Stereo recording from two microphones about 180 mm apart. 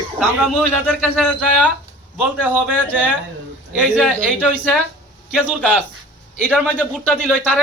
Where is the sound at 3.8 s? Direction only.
5° left (ahead or behind).